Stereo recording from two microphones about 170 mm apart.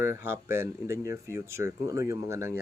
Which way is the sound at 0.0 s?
15° right (ahead or behind).